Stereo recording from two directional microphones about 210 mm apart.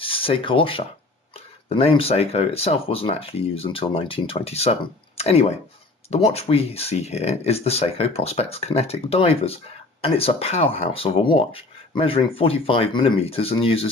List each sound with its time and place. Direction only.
0.0 s speech: 25° left (ahead or behind)